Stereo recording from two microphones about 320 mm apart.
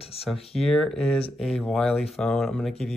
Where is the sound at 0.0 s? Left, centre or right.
Centre.